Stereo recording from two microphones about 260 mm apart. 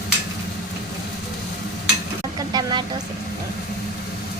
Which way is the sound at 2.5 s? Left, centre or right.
Centre.